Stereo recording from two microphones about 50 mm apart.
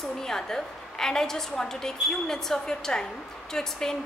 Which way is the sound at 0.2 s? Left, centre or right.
Centre.